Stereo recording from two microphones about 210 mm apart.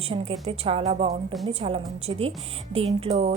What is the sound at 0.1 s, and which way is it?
A woman's voice, 30° right (ahead or behind).